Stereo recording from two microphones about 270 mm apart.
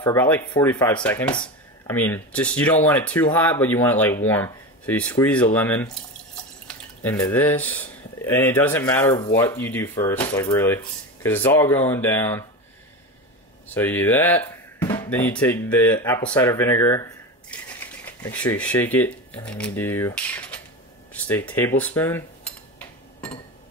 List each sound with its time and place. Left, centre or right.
0.0 s speech: centre
1.3 s a sound: centre
2.0 s speech: centre
7.0 s speech: centre
13.7 s speech: centre